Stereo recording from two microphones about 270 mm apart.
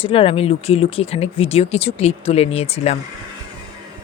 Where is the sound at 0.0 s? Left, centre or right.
Left.